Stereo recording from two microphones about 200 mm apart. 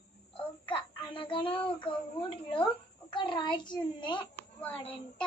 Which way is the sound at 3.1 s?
25° left (ahead or behind).